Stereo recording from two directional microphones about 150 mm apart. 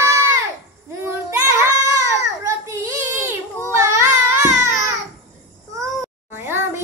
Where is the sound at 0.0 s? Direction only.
20° right (ahead or behind).